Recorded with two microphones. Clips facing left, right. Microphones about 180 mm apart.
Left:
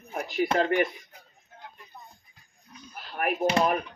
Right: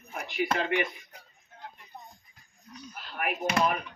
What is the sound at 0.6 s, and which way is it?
Speech, 40° left (ahead or behind).